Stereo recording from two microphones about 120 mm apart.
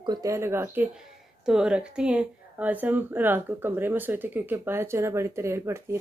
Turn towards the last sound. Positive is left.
turn(degrees=-25)  # may be behind; listen again after turning